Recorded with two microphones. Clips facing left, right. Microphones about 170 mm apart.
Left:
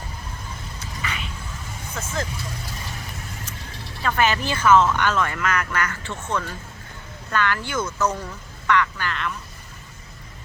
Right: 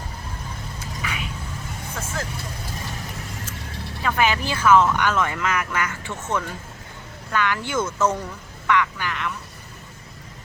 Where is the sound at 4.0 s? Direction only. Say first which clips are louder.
Even; 10° right (ahead or behind).